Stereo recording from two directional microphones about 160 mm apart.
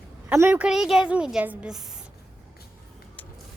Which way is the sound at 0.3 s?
10° right (ahead or behind).